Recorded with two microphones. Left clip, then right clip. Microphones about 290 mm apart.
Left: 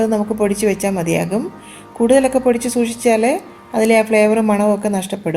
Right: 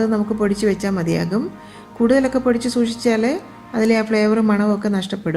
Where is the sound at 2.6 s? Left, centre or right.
Centre.